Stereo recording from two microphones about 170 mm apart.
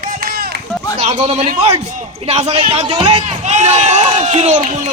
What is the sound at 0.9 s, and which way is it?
A man's voice, 40° right (ahead or behind).